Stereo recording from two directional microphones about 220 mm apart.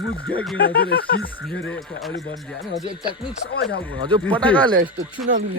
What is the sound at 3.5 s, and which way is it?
Speech, 45° left (ahead or behind).